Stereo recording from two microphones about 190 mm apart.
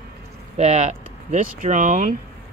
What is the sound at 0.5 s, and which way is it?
Speech, 35° right (ahead or behind).